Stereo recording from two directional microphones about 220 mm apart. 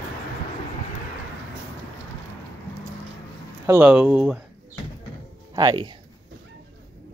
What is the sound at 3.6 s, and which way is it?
Speech, 10° right (ahead or behind).